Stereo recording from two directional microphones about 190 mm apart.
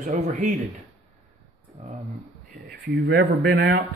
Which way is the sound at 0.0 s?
40° right (ahead or behind).